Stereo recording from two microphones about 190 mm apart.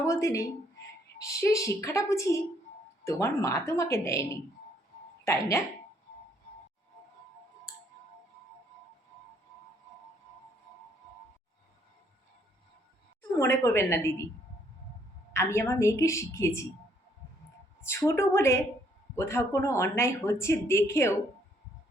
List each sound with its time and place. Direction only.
0.0 s speech: 15° left (ahead or behind)
13.4 s speech: 15° left (ahead or behind)
15.3 s speech: 15° left (ahead or behind)
17.7 s speech: 15° left (ahead or behind)